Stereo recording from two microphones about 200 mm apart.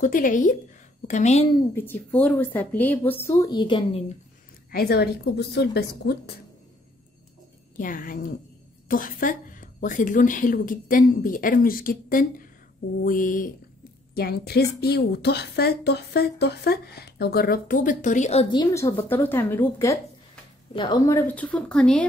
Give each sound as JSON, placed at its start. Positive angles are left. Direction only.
{"t": 0.0, "sound": "speech", "side_deg": 40}
{"t": 1.8, "sound": "a woman's voice", "side_deg": 10}
{"t": 4.6, "sound": "a woman's voice", "side_deg": 50}
{"t": 7.7, "sound": "a woman's voice", "side_deg": 45}